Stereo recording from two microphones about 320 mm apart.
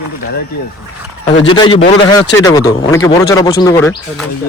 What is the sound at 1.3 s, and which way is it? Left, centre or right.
Speech, left.